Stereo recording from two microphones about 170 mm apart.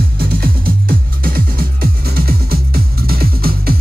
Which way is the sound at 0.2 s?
60° right (ahead or behind).